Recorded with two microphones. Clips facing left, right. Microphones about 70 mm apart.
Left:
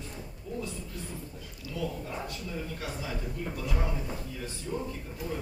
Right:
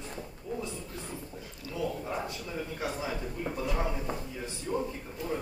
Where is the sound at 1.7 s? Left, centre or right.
Right.